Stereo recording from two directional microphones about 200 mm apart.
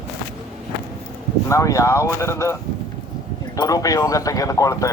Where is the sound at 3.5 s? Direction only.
15° left (ahead or behind).